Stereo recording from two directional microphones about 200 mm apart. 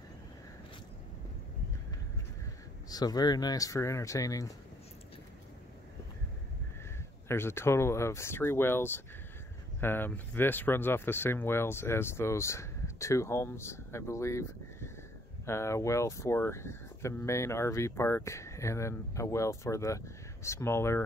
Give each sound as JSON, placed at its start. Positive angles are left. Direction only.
{"t": 2.9, "sound": "speech", "side_deg": 20}
{"t": 7.2, "sound": "speech", "side_deg": 10}